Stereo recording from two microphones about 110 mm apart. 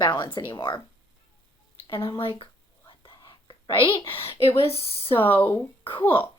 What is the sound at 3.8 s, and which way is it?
Speech, 50° left (ahead or behind).